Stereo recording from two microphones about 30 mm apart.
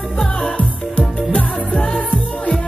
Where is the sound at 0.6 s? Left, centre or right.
Left.